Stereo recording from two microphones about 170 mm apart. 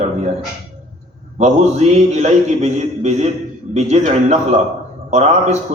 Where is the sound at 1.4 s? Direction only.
40° right (ahead or behind).